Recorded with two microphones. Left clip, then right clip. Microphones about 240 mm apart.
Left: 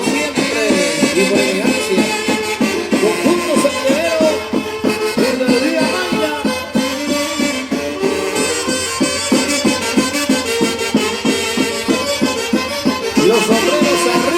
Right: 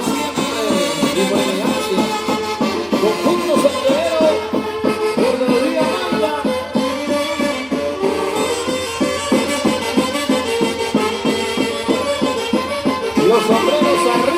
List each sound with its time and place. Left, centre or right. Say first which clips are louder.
0.8 s music: left 3 dB; left
2.6 s music: left 2 dB; left
13.1 s music: left 1 dB; left